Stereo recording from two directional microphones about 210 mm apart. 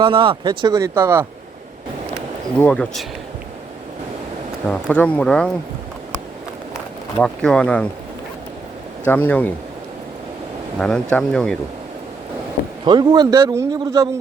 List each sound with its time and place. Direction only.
0.0 s speech: 25° right (ahead or behind)
2.6 s speech: 5° left (ahead or behind)
4.7 s speech: 5° left (ahead or behind)
7.2 s speech: 5° left (ahead or behind)
9.0 s speech: 10° left (ahead or behind)
10.8 s speech: 5° left (ahead or behind)
12.8 s a man's voice: 20° right (ahead or behind)